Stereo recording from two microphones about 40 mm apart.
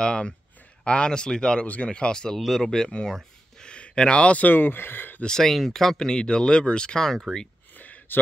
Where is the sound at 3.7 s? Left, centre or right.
Left.